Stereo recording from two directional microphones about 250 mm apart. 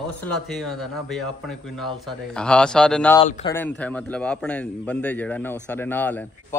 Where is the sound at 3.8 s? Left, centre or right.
Centre.